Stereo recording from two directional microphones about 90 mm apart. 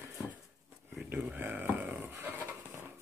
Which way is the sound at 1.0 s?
10° right (ahead or behind).